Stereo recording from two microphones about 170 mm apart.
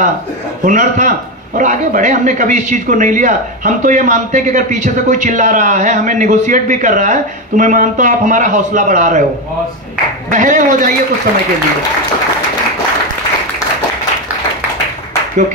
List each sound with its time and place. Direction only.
0.7 s speech: 50° right (ahead or behind)
10.3 s speech: 50° right (ahead or behind)